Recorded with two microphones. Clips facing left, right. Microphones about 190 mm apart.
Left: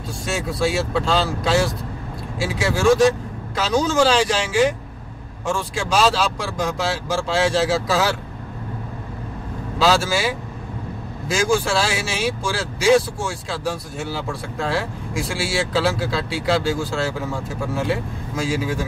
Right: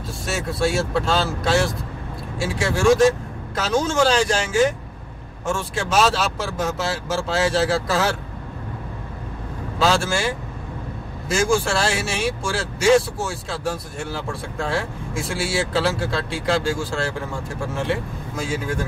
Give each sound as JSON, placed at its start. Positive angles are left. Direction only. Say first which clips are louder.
{"t": 0.2, "sound": "speech", "louder": "even", "side_deg": 0}
{"t": 9.8, "sound": "speech", "louder": "left 2 dB", "side_deg": 0}
{"t": 11.5, "sound": "speech", "louder": "even", "side_deg": 0}